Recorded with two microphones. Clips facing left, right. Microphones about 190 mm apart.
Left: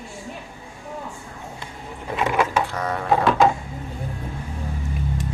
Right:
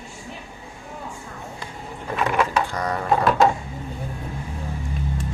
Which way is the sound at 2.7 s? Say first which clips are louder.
Even; 5° left (ahead or behind).